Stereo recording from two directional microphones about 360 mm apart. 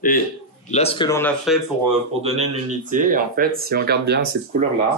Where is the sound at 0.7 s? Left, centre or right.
Centre.